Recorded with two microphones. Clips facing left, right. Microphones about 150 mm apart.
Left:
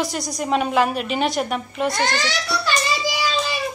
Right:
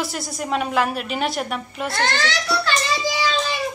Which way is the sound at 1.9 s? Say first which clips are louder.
Right 2 dB; 15° left (ahead or behind).